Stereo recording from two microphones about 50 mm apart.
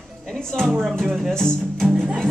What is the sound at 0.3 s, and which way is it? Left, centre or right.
A woman's voice, centre.